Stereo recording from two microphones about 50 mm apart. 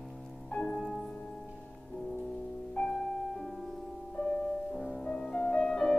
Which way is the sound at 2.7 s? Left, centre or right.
Left.